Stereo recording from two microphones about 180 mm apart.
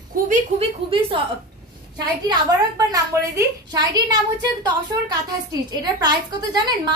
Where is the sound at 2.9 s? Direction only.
20° right (ahead or behind).